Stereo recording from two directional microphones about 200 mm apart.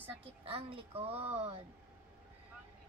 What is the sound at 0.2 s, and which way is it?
Speech, 30° right (ahead or behind).